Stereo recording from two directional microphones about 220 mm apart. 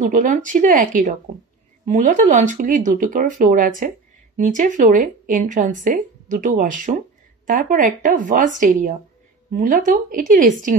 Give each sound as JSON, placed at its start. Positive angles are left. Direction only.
{"t": 0.0, "sound": "speech", "side_deg": -35}